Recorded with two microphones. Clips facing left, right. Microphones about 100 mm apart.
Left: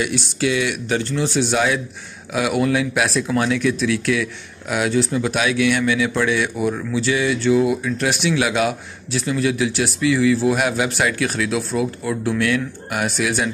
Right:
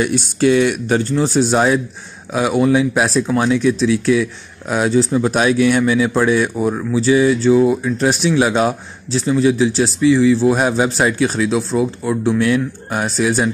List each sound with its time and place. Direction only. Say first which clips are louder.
0.0 s speech: right 6 dB; 45° right (ahead or behind)
2.3 s speech: right 4 dB; 25° right (ahead or behind)